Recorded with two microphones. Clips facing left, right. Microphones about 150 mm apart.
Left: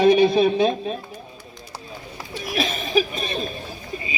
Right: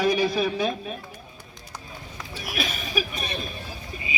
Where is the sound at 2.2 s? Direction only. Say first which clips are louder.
Left 6 dB; 30° left (ahead or behind).